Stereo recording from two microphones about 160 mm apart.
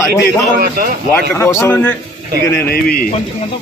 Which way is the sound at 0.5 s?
70° right (ahead or behind).